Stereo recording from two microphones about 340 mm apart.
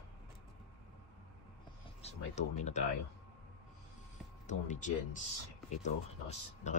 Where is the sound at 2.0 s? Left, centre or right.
Centre.